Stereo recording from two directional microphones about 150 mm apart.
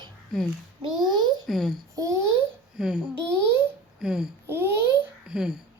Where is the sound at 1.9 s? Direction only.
20° right (ahead or behind).